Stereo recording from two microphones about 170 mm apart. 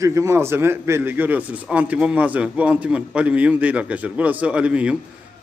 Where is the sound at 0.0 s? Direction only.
20° right (ahead or behind).